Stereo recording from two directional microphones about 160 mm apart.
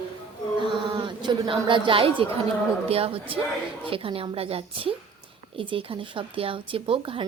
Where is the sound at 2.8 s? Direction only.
35° right (ahead or behind).